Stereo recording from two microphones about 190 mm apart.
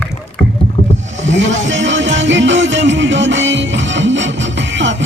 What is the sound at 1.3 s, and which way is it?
Music, 75° right (ahead or behind).